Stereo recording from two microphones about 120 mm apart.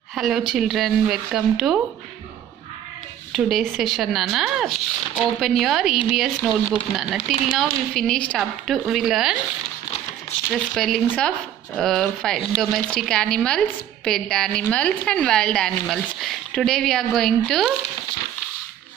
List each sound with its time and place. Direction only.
0.1 s speech: centre (ahead or behind)
3.3 s speech: centre (ahead or behind)
10.7 s a woman's voice: centre (ahead or behind)